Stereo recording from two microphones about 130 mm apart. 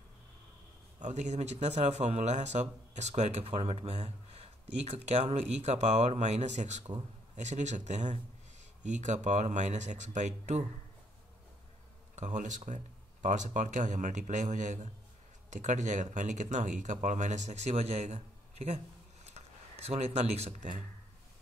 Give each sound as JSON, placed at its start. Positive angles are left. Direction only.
{"t": 0.9, "sound": "a man's voice", "side_deg": -65}
{"t": 12.2, "sound": "speech", "side_deg": -70}
{"t": 19.4, "sound": "a sound", "side_deg": -55}
{"t": 19.9, "sound": "speech", "side_deg": -55}